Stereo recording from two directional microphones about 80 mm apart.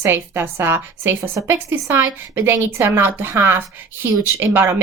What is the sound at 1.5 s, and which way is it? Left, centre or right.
A woman's voice, right.